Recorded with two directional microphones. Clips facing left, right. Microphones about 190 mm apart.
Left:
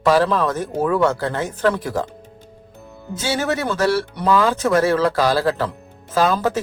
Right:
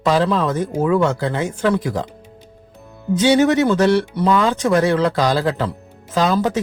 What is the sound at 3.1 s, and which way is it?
Speech, 20° right (ahead or behind).